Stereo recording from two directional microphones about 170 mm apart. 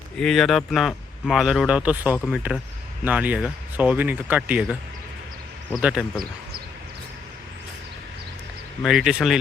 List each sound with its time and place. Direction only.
0.2 s speech: centre (ahead or behind)
8.8 s speech: centre (ahead or behind)